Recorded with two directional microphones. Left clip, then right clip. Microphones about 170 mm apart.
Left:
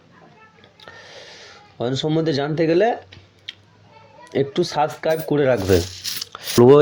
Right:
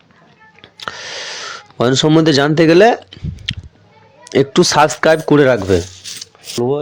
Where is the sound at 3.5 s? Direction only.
50° right (ahead or behind).